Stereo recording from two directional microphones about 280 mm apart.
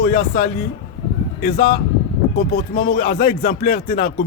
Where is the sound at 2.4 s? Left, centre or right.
Left.